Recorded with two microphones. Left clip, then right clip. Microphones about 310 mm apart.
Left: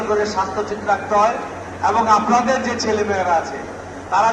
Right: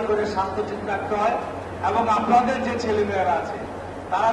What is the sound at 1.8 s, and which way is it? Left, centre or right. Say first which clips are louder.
Speech: left 6 dB; centre.